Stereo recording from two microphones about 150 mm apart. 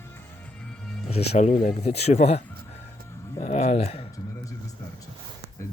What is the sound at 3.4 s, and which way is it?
Speech, 50° left (ahead or behind).